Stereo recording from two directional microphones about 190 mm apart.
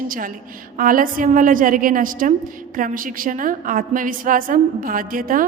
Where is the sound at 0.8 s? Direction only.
45° right (ahead or behind).